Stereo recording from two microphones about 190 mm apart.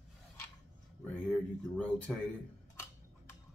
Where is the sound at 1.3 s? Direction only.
5° left (ahead or behind).